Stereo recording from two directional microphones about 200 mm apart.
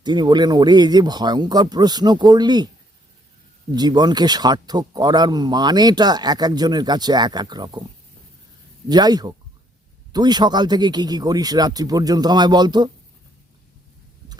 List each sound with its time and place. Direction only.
0.0 s speech: 20° right (ahead or behind)
3.7 s speech: 20° right (ahead or behind)
8.9 s speech: 20° right (ahead or behind)